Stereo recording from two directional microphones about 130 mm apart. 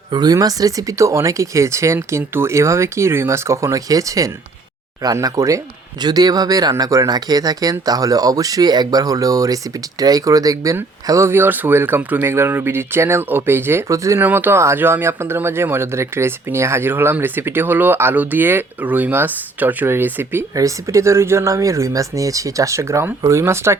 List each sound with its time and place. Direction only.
0.1 s speech: 30° right (ahead or behind)